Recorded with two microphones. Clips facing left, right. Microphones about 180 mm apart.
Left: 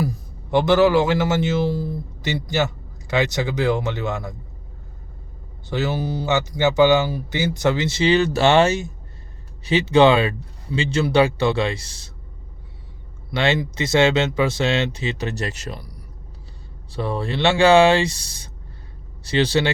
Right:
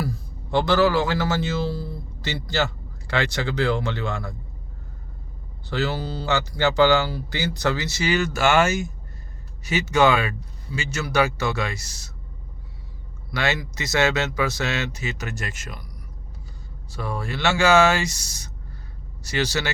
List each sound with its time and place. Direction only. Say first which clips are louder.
0.0 s a man's voice: left 4 dB; 20° left (ahead or behind)
5.6 s speech: left 2 dB; 20° left (ahead or behind)
13.3 s speech: left 5 dB; 25° left (ahead or behind)